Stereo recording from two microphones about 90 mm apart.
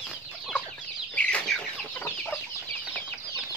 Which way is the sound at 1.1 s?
15° left (ahead or behind).